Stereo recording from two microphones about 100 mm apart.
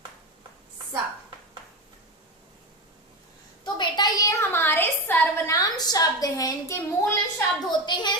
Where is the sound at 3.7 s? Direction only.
50° left (ahead or behind).